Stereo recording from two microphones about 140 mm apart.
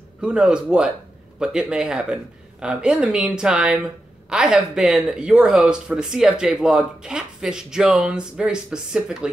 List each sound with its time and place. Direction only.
0.2 s speech: 5° right (ahead or behind)